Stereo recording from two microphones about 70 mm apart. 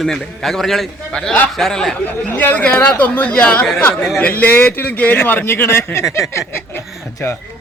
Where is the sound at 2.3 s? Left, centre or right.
Left.